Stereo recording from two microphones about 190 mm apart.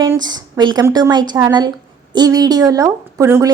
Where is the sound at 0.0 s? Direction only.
20° right (ahead or behind).